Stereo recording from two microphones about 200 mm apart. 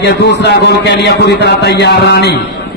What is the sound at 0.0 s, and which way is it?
A man's voice, 60° left (ahead or behind).